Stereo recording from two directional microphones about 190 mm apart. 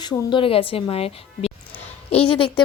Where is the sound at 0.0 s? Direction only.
20° left (ahead or behind).